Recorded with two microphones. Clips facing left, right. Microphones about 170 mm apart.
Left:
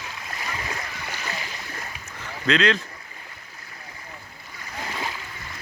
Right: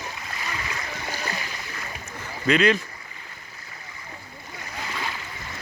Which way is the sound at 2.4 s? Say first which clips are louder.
Right 2 dB; 10° right (ahead or behind).